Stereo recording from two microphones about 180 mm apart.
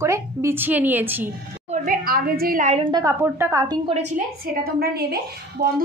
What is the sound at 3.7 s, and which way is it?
Speech, 30° right (ahead or behind).